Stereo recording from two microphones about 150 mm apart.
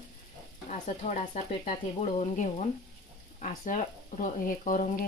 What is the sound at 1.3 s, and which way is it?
Frying, 45° left (ahead or behind).